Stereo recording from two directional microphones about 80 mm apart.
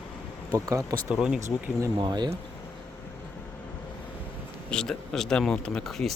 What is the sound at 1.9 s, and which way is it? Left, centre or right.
Speech, right.